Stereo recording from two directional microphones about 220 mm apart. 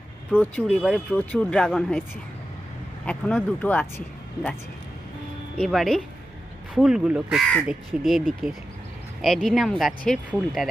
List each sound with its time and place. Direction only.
0.3 s speech: centre (ahead or behind)
3.1 s speech: 5° left (ahead or behind)
5.5 s speech: centre (ahead or behind)
9.2 s speech: centre (ahead or behind)